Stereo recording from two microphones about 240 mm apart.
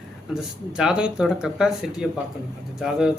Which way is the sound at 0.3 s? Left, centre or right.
Centre.